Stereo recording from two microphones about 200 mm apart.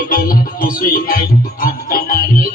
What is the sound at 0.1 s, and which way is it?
Music, 45° left (ahead or behind).